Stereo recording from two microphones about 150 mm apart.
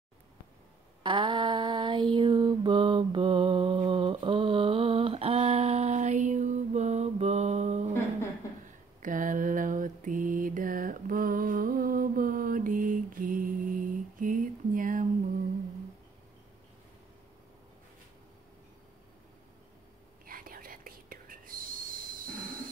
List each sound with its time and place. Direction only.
1.0 s mantra: 30° right (ahead or behind); by 7.9 s 50° right (ahead or behind)
9.0 s mantra: 60° right (ahead or behind)
20.2 s whispering: 70° right (ahead or behind)